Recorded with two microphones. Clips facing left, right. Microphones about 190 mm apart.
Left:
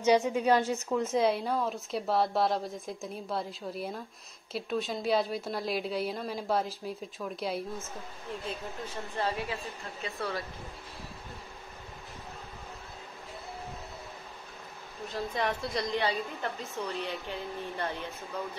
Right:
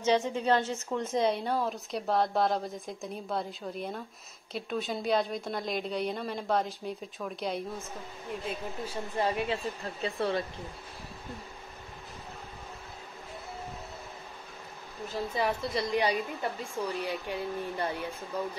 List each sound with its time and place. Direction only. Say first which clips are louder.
0.0 s a woman's voice: left 2 dB; 10° left (ahead or behind)
8.5 s a woman's voice: right 3 dB; 10° right (ahead or behind)
10.0 s speech: right 5 dB; 30° right (ahead or behind)
15.0 s a woman's voice: right 1 dB; 5° right (ahead or behind)